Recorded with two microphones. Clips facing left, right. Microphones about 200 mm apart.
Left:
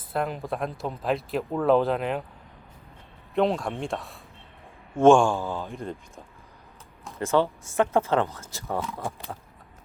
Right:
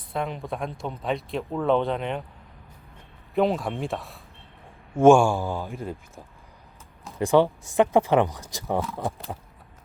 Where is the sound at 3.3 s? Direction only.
Centre (ahead or behind).